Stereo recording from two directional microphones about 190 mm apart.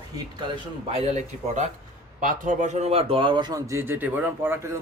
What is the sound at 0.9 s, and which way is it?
Speech, 35° right (ahead or behind).